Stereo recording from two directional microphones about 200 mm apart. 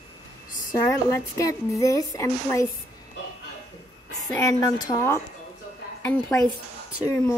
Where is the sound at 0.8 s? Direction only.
15° left (ahead or behind).